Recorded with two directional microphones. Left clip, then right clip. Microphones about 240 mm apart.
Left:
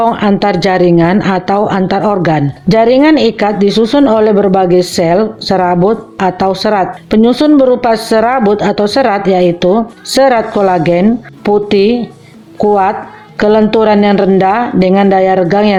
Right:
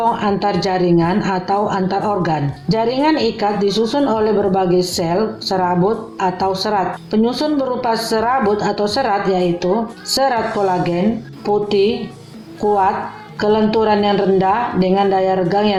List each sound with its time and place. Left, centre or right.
0.0 s speech: left
11.4 s speech: left
13.4 s speech: left